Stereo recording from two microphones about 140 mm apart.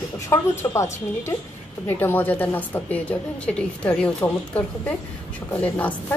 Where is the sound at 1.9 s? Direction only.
15° left (ahead or behind).